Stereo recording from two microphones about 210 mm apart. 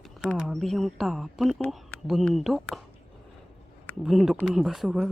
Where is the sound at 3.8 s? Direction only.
Centre (ahead or behind).